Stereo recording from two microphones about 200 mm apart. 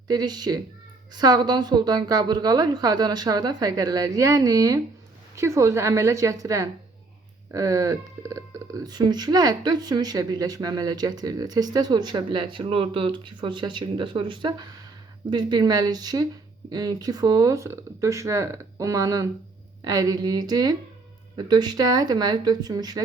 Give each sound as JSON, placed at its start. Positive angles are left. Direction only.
{"t": 0.1, "sound": "speech", "side_deg": -20}